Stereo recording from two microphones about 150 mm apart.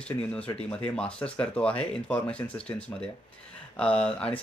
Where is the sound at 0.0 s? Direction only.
5° left (ahead or behind).